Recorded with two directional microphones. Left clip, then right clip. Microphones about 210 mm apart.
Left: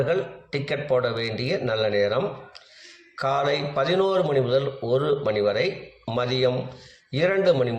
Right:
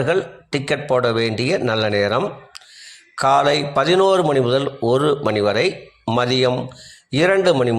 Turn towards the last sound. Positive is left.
turn(degrees=-50)  # may be behind; listen again after turning